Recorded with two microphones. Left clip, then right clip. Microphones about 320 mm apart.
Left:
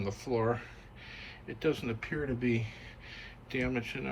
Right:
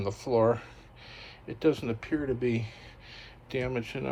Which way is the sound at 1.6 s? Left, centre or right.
Centre.